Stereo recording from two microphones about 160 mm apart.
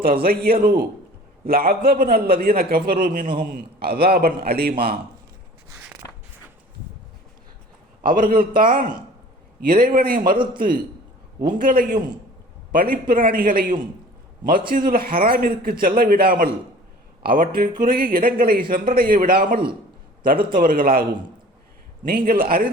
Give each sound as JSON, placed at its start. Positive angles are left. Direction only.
{"t": 0.0, "sound": "a man's voice", "side_deg": -65}
{"t": 5.7, "sound": "a sound", "side_deg": -10}
{"t": 8.0, "sound": "speech", "side_deg": -60}
{"t": 22.0, "sound": "speech", "side_deg": -65}